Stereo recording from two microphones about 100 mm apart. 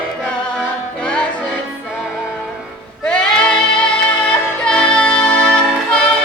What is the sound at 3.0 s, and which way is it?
Music, 10° left (ahead or behind).